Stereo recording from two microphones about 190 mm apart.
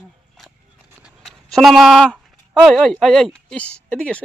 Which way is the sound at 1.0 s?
Centre (ahead or behind).